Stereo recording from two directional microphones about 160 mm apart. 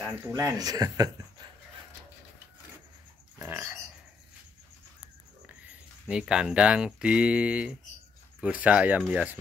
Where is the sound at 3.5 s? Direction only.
10° right (ahead or behind).